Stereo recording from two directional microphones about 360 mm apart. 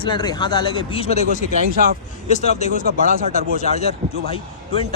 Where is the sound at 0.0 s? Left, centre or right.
Centre.